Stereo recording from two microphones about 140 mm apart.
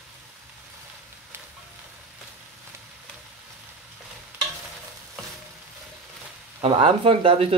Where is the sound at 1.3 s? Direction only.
15° right (ahead or behind).